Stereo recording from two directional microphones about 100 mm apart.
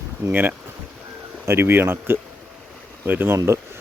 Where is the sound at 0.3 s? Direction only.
20° right (ahead or behind).